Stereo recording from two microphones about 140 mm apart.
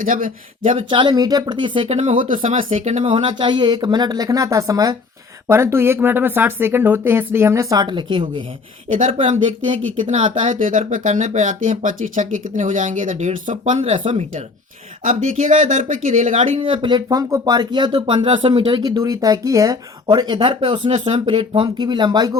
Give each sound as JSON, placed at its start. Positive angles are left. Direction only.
{"t": 0.0, "sound": "speech", "side_deg": -80}
{"t": 0.9, "sound": "speech", "side_deg": -35}
{"t": 1.9, "sound": "speech", "side_deg": -55}
{"t": 10.1, "sound": "speech", "side_deg": -50}
{"t": 10.5, "sound": "speech", "side_deg": -70}
{"t": 13.9, "sound": "speech", "side_deg": -35}
{"t": 15.0, "sound": "speech", "side_deg": -65}
{"t": 16.4, "sound": "speech", "side_deg": -40}
{"t": 18.8, "sound": "speech", "side_deg": -25}
{"t": 20.9, "sound": "speech", "side_deg": -55}
{"t": 21.2, "sound": "speech", "side_deg": -40}